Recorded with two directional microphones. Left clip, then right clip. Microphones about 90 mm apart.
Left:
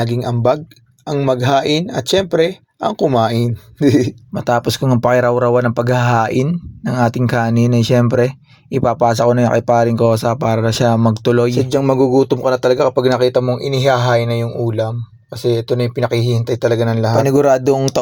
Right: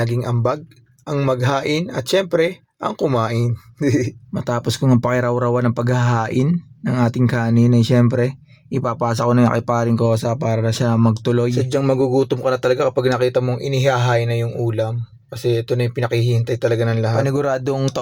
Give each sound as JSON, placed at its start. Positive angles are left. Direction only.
{"t": 0.0, "sound": "speech", "side_deg": 0}
{"t": 3.2, "sound": "speech", "side_deg": 20}
{"t": 10.2, "sound": "speech", "side_deg": 40}